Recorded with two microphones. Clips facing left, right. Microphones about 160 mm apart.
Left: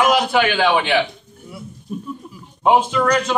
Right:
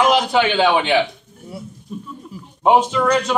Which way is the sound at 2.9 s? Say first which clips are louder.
Even; 5° right (ahead or behind).